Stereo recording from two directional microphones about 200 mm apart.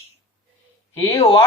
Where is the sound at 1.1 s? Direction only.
30° left (ahead or behind).